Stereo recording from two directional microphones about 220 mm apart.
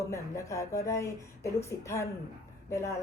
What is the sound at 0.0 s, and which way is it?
A woman's voice, 15° left (ahead or behind).